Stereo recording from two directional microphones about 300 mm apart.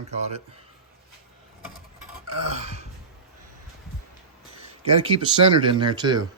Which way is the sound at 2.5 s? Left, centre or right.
Right.